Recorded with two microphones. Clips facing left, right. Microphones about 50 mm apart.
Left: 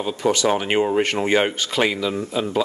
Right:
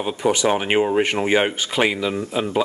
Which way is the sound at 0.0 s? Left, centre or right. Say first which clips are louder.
Even; centre.